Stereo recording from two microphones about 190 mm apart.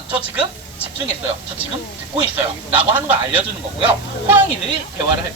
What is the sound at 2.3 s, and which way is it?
Speech, 10° right (ahead or behind).